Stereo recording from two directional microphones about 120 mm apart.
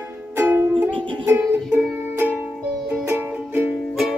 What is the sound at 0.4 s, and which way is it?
Music, 15° right (ahead or behind).